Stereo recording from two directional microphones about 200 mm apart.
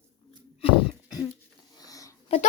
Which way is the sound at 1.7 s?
20° left (ahead or behind).